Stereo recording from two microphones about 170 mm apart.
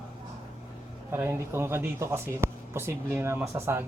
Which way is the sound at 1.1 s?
15° right (ahead or behind).